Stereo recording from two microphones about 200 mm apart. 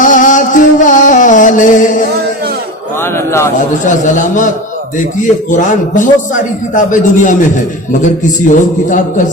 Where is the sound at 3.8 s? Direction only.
40° left (ahead or behind).